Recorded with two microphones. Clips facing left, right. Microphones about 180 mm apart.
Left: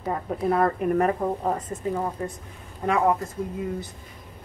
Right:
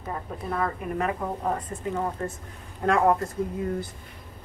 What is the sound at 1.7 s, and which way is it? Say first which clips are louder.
Speech: left 2 dB; 15° left (ahead or behind).